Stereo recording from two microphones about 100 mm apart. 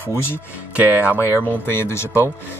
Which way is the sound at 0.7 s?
15° right (ahead or behind).